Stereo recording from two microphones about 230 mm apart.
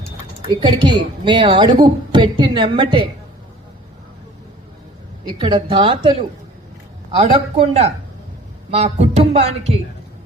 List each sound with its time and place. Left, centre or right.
0.4 s a woman's voice: right
5.4 s a woman's voice: centre